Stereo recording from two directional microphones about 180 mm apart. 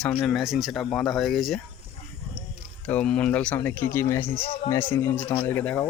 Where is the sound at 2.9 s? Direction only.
5° left (ahead or behind).